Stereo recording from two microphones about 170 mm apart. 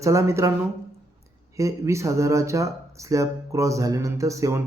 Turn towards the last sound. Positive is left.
turn(degrees=-20)  # may be behind; listen again after turning